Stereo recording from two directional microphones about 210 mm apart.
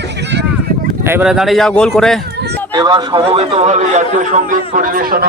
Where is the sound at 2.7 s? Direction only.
20° right (ahead or behind); by 5.2 s 45° right (ahead or behind).